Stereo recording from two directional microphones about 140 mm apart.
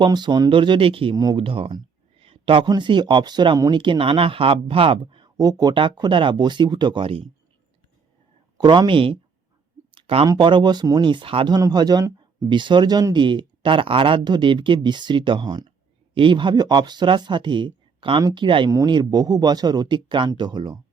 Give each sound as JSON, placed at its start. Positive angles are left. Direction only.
{"t": 0.0, "sound": "speech", "side_deg": -30}
{"t": 8.6, "sound": "speech", "side_deg": -35}
{"t": 9.9, "sound": "a sound", "side_deg": -45}
{"t": 10.2, "sound": "speech", "side_deg": -35}